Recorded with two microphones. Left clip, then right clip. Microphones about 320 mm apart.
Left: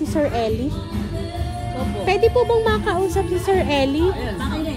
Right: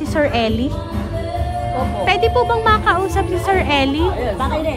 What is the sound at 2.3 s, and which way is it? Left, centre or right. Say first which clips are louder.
Music: right 3 dB; right.